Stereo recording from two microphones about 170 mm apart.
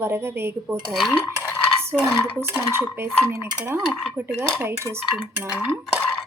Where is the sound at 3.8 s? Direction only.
Centre (ahead or behind).